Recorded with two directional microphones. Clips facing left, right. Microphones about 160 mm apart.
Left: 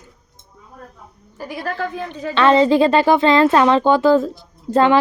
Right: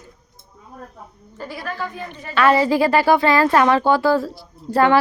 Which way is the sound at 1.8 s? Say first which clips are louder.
Left 4 dB; 90° left.